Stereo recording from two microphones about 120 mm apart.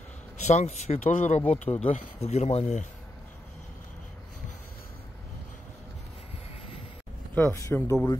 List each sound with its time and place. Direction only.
0.5 s speech: 70° left (ahead or behind)
1.5 s speech: 60° left (ahead or behind); by 2.9 s 80° left
7.3 s speech: 25° left (ahead or behind)